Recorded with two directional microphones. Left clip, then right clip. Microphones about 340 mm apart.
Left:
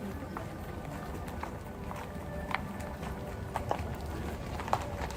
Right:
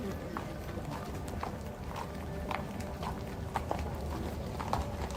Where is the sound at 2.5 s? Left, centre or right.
Left.